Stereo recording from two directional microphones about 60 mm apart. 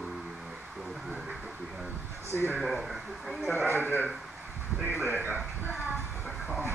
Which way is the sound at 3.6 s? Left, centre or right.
Right.